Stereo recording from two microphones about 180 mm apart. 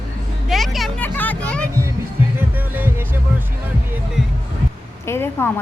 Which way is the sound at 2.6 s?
10° right (ahead or behind).